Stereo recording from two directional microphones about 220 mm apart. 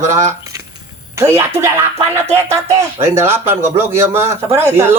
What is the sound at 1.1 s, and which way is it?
Speech, 10° right (ahead or behind).